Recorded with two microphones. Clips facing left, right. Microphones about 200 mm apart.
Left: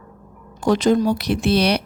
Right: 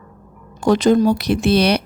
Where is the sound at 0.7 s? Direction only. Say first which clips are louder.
Right 3 dB; 60° right (ahead or behind).